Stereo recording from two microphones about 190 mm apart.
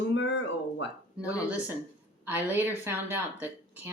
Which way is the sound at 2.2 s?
10° right (ahead or behind).